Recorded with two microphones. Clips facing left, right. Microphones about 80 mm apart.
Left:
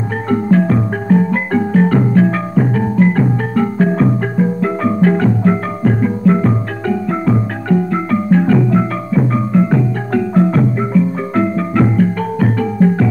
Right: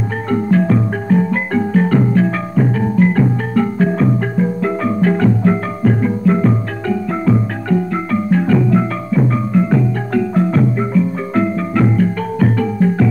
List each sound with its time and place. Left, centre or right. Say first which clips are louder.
0.3 s music: left 1 dB; left